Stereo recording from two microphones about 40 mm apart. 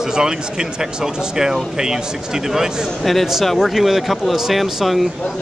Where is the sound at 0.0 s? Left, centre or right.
Centre.